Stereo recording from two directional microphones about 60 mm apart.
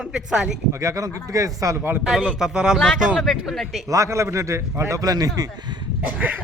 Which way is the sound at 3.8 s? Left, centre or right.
Right.